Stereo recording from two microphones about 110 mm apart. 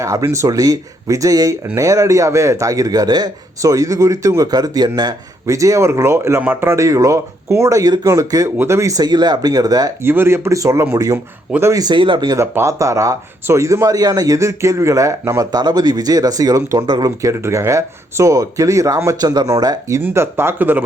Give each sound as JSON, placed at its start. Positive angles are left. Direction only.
{"t": 0.0, "sound": "speech", "side_deg": -30}
{"t": 10.0, "sound": "speech", "side_deg": -20}
{"t": 11.9, "sound": "speech", "side_deg": -50}
{"t": 12.3, "sound": "speech", "side_deg": -25}
{"t": 15.5, "sound": "speech", "side_deg": -40}
{"t": 17.3, "sound": "speech", "side_deg": -25}
{"t": 20.0, "sound": "speech", "side_deg": -20}